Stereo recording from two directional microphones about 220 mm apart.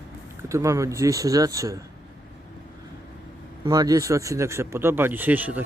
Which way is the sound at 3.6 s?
15° right (ahead or behind).